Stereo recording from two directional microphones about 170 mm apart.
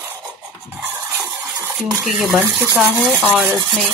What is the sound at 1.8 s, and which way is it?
Speech, centre (ahead or behind).